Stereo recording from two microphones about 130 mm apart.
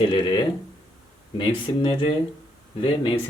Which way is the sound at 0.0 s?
35° left (ahead or behind).